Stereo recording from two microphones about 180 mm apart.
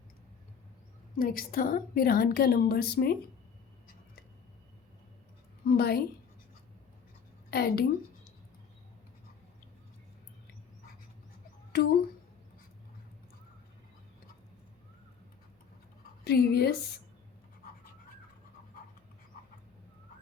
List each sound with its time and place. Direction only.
1.2 s a woman's voice: 50° left (ahead or behind)
5.6 s a woman's voice: 60° left (ahead or behind)
7.5 s a woman's voice: 60° left (ahead or behind)
11.7 s a child's voice: 65° left (ahead or behind)
16.2 s a woman's voice: 60° left (ahead or behind)